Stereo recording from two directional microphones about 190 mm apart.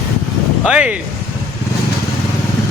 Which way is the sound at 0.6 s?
5° right (ahead or behind).